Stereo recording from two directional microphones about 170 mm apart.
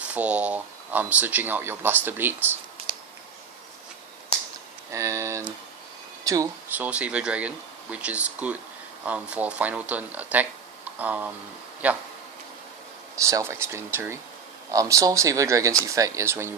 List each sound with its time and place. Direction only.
0.0 s speech: 10° right (ahead or behind)
4.9 s speech: 15° right (ahead or behind)
13.1 s speech: 15° right (ahead or behind)